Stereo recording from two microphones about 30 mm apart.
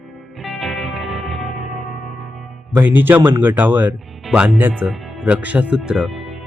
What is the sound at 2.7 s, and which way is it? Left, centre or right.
A man's voice, right.